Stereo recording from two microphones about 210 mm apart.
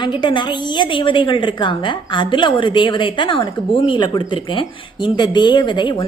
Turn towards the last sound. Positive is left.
turn(degrees=20)  # may be behind; listen again after turning